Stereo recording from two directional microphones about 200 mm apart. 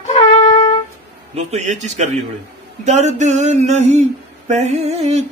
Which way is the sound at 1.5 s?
35° right (ahead or behind).